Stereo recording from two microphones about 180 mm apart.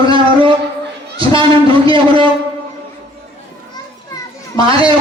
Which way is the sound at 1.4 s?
30° right (ahead or behind).